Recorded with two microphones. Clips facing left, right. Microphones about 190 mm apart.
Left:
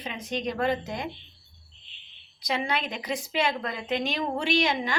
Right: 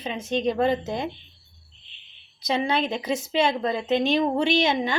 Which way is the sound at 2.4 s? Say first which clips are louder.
Right 5 dB; 25° right (ahead or behind).